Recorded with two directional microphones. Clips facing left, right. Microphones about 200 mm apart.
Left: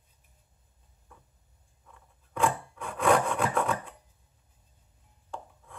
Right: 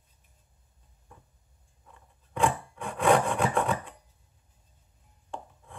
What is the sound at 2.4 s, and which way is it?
Wood, 25° right (ahead or behind).